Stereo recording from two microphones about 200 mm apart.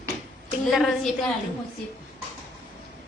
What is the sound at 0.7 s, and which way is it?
Speech, centre (ahead or behind).